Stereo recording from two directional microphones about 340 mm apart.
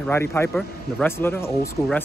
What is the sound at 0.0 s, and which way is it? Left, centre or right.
A man's voice, centre.